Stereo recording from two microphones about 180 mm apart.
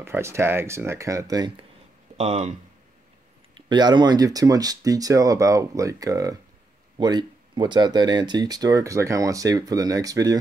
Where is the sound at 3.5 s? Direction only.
25° right (ahead or behind).